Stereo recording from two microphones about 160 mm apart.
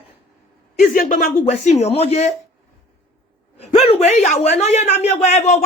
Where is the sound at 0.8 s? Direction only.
55° left (ahead or behind).